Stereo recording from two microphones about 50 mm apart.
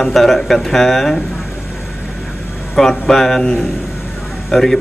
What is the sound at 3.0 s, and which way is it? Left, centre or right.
A man's voice, centre.